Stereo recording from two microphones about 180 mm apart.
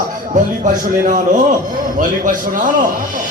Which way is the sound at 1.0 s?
45° right (ahead or behind).